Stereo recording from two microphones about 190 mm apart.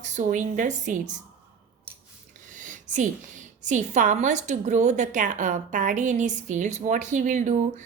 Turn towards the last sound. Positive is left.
turn(degrees=-40)  # may be behind; listen again after turning